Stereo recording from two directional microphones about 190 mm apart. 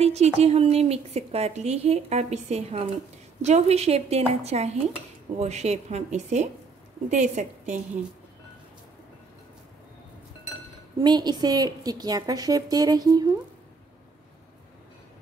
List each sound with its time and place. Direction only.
0.0 s a woman's voice: 35° right (ahead or behind)
11.0 s a woman's voice: 20° right (ahead or behind)